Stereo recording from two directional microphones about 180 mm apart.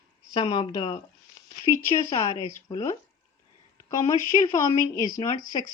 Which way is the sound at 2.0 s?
30° left (ahead or behind).